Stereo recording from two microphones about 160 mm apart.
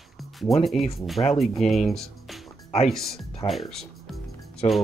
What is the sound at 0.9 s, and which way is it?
Speech, centre (ahead or behind).